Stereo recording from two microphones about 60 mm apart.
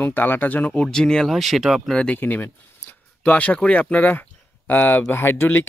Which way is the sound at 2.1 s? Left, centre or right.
Left.